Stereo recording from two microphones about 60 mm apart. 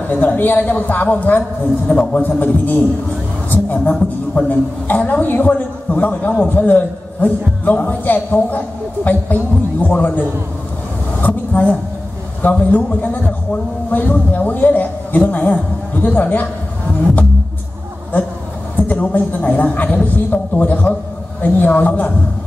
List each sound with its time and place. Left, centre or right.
0.1 s a man's voice: left
1.9 s speech: centre
2.2 s a man's voice: left
3.4 s a sound: left
3.9 s speech: centre
4.5 s a man's voice: left
18.8 s a man's voice: left